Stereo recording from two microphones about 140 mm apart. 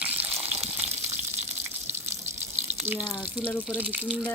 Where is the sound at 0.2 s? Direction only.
45° right (ahead or behind).